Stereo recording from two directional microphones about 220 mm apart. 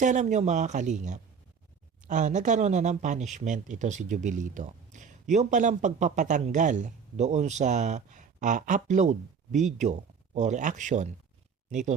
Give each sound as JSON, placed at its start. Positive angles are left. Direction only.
{"t": 0.0, "sound": "speech", "side_deg": -35}